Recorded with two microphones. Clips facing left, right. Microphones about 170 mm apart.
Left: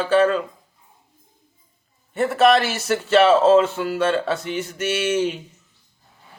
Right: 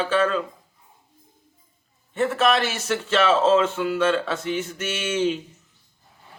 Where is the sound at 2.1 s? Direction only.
10° left (ahead or behind).